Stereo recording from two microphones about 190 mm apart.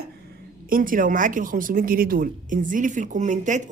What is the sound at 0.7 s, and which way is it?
Speech, 45° right (ahead or behind).